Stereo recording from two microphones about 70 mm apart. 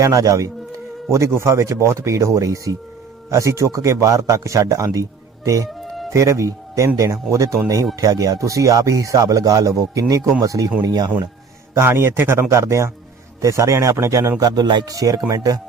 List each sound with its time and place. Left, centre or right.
0.0 s a man's voice: right
5.6 s music: centre
6.1 s a man's voice: right
10.8 s speech: right
11.7 s a man's voice: right